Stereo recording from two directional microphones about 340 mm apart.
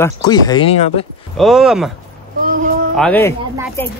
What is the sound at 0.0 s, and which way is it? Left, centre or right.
A man's voice, centre.